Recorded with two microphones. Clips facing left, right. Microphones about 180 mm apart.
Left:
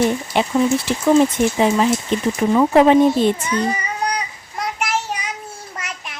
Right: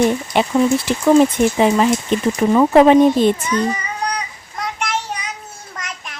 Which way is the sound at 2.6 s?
65° right (ahead or behind).